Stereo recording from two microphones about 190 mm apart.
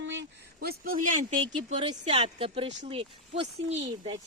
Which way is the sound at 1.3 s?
25° right (ahead or behind).